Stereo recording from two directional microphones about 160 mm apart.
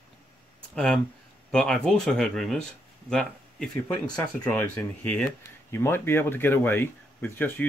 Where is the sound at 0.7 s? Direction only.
5° left (ahead or behind).